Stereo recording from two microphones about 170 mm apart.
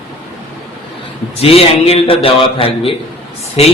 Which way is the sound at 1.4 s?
35° left (ahead or behind).